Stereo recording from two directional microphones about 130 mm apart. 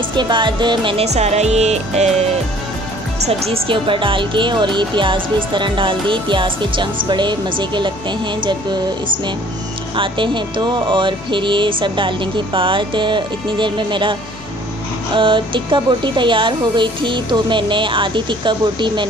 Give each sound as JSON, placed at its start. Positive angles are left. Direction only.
{"t": 0.1, "sound": "speech", "side_deg": -35}
{"t": 1.0, "sound": "music", "side_deg": -60}
{"t": 3.3, "sound": "speech", "side_deg": -50}
{"t": 15.1, "sound": "speech", "side_deg": -40}